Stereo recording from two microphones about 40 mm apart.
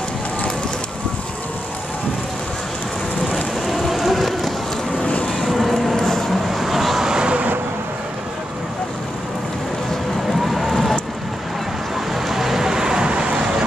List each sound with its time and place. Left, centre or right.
3.6 s rain on surface: centre
5.0 s vehicle: left
5.4 s vehicle: centre
5.9 s vehicle: centre
6.5 s vehicle: centre
7.1 s vehicle: centre
10.4 s a sound: centre
12.1 s vehicle: centre; by 13.7 s right